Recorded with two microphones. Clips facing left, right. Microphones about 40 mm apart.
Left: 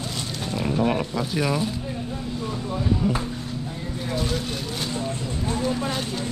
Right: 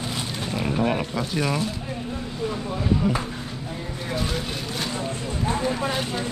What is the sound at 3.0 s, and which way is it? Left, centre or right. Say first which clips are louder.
Speech: even; centre.